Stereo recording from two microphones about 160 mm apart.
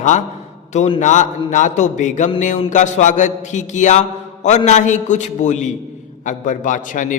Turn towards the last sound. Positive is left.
turn(degrees=55)  # may be behind; listen again after turning